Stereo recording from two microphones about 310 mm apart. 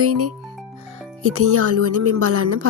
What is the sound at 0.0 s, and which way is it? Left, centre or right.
Speech, right.